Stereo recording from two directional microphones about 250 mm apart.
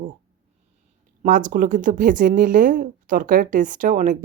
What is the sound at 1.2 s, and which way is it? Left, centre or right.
Speech, right.